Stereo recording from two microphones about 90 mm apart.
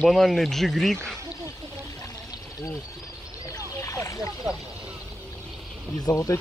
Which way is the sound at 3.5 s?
35° left (ahead or behind).